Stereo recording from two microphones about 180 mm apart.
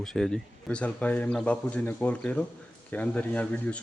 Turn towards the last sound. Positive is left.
turn(degrees=10)  # may be behind; listen again after turning